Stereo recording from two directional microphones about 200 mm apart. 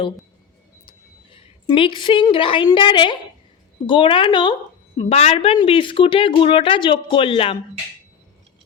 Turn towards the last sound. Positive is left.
turn(degrees=25)  # may be behind; listen again after turning